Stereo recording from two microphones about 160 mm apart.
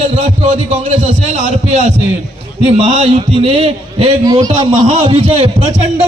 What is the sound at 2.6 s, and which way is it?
A man's voice, 40° right (ahead or behind).